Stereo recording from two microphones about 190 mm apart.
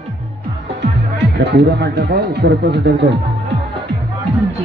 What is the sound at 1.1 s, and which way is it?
Speech, 60° right (ahead or behind).